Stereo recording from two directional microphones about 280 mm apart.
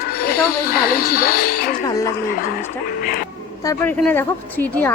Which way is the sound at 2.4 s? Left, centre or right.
Left.